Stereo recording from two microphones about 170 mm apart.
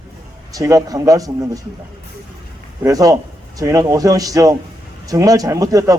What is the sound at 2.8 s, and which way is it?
A man's voice, 20° right (ahead or behind).